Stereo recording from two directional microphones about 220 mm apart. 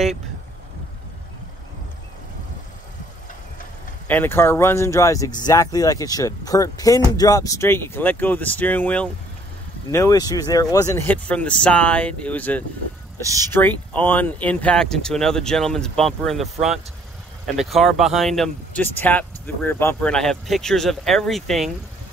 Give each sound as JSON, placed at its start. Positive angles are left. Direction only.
{"t": 4.1, "sound": "speech", "side_deg": 10}
{"t": 17.5, "sound": "speech", "side_deg": 0}